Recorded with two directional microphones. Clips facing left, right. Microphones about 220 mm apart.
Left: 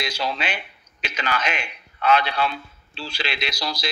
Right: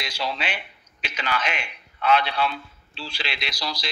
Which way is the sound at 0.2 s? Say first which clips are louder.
Right 2 dB; 45° left (ahead or behind).